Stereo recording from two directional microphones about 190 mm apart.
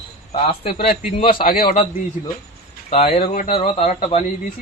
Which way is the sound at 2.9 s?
30° left (ahead or behind).